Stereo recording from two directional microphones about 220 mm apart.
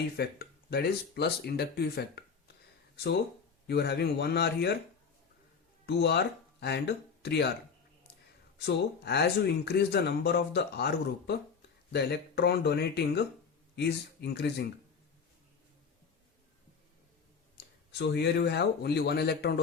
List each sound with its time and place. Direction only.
0.2 s speech: 45° left (ahead or behind)
5.8 s speech: 50° left (ahead or behind)
8.5 s speech: 50° left (ahead or behind)
17.6 s a sound: 50° left (ahead or behind)
17.9 s speech: 50° left (ahead or behind)